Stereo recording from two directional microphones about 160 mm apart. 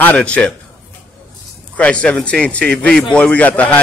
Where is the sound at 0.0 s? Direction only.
10° left (ahead or behind).